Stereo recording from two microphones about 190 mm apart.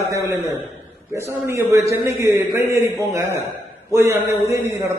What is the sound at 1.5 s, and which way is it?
A man's voice, 15° right (ahead or behind).